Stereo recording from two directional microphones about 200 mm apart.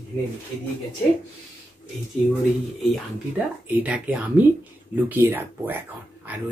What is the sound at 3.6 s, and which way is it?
Speech, 5° right (ahead or behind).